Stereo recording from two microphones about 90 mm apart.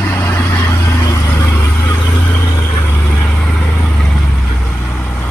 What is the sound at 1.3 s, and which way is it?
Vehicle, 30° left (ahead or behind).